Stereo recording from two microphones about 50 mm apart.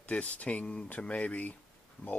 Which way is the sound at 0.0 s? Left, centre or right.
Left.